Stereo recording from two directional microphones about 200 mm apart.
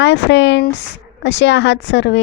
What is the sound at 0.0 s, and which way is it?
A woman's voice, 60° left (ahead or behind).